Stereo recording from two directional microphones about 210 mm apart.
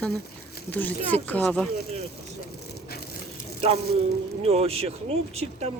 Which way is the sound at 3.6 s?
30° right (ahead or behind).